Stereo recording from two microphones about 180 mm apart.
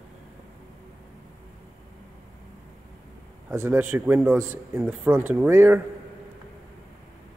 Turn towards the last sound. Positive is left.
turn(degrees=-10)  # may be behind; listen again after turning